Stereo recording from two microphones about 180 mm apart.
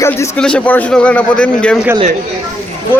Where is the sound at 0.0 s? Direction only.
15° left (ahead or behind).